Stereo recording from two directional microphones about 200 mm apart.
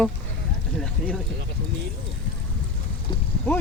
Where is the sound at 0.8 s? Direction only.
5° left (ahead or behind).